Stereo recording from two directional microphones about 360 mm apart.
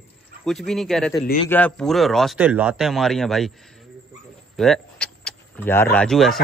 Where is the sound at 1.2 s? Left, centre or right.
Left.